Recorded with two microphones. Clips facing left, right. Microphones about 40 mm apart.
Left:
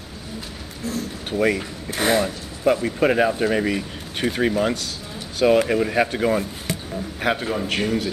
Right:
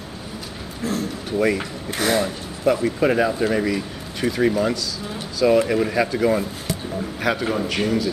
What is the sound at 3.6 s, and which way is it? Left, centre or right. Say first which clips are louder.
Speech: right 1 dB; left.